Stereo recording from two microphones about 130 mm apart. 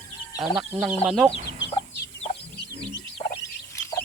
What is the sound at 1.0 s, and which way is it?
Speech, 5° right (ahead or behind).